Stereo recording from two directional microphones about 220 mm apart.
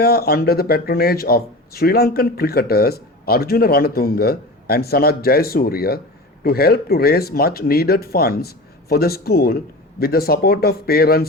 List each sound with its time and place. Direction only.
0.0 s speech: 45° left (ahead or behind)